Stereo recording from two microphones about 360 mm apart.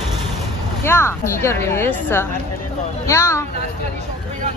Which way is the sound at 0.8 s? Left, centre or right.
Centre.